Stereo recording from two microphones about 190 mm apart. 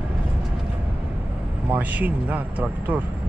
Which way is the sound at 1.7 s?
10° right (ahead or behind).